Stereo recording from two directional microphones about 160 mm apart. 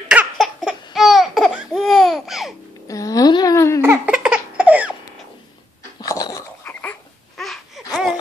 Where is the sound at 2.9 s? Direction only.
20° left (ahead or behind).